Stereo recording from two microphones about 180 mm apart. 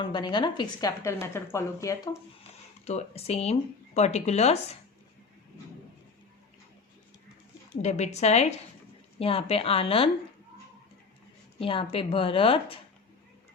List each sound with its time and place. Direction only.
0.0 s a woman's voice: 25° left (ahead or behind)
2.8 s speech: 35° left (ahead or behind)
7.8 s speech: 40° left (ahead or behind)
11.6 s speech: 30° left (ahead or behind)